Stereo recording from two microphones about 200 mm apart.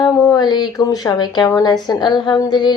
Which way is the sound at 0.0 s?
20° left (ahead or behind).